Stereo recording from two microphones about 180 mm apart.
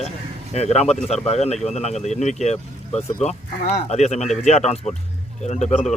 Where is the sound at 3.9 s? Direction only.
40° left (ahead or behind).